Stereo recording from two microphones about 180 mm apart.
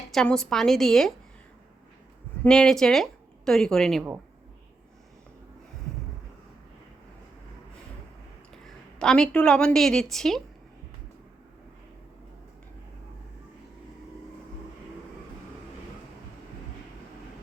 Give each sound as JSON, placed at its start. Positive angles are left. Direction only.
{"t": 0.1, "sound": "a woman's voice", "side_deg": 5}
{"t": 2.4, "sound": "a woman's voice", "side_deg": 5}
{"t": 8.6, "sound": "a woman's voice", "side_deg": 5}